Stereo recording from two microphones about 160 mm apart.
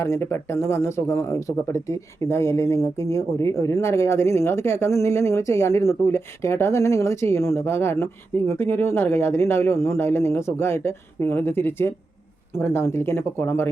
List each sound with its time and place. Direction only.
0.0 s speech: 15° left (ahead or behind)